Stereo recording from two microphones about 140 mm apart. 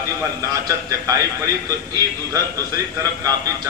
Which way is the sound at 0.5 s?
25° right (ahead or behind).